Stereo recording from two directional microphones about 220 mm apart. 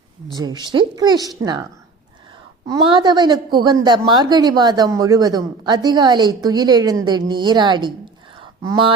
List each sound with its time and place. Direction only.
0.3 s speech: 20° right (ahead or behind)
2.6 s a woman's voice: 20° right (ahead or behind)